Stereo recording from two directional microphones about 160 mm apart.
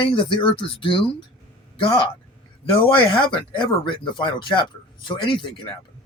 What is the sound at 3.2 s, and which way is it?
Speech, 30° left (ahead or behind).